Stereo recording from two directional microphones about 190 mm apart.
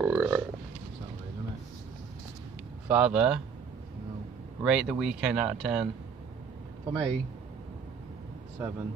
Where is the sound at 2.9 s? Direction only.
5° right (ahead or behind).